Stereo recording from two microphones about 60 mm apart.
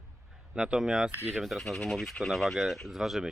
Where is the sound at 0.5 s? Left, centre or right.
Centre.